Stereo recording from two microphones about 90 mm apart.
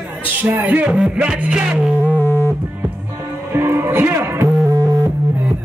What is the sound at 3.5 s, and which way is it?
Music, 30° right (ahead or behind).